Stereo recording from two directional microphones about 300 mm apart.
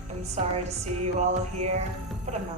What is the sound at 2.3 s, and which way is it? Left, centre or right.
Speech, right.